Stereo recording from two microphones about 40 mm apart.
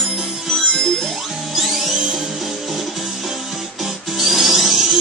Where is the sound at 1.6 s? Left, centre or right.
Centre.